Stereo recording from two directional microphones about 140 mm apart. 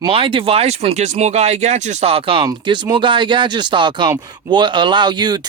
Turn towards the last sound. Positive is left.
turn(degrees=-30)  # may be behind; listen again after turning